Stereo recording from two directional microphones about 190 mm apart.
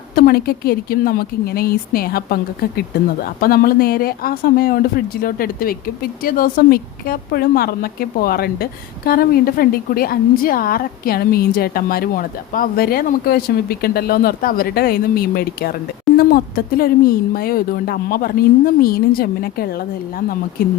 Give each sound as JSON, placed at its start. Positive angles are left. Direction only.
{"t": 0.2, "sound": "speech", "side_deg": 50}